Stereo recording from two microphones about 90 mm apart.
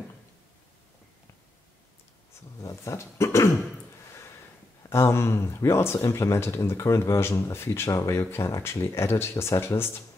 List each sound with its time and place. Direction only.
2.6 s speech: 35° left (ahead or behind)
4.8 s speech: 30° left (ahead or behind)